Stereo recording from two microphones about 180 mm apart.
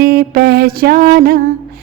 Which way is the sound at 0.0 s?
55° right (ahead or behind).